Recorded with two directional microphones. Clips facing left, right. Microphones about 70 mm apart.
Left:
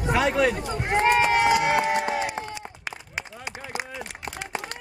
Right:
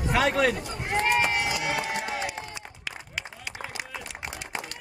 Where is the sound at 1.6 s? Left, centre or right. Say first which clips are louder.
Left 7 dB; left.